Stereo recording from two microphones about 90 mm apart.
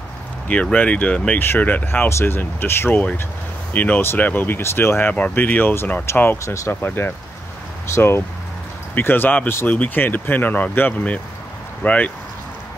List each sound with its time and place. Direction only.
0.5 s speech: 15° left (ahead or behind); by 6.7 s 35° left (ahead or behind)
6.7 s speech: 25° left (ahead or behind)